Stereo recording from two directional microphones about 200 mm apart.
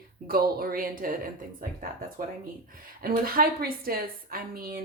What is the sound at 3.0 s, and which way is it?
Speech, 50° right (ahead or behind).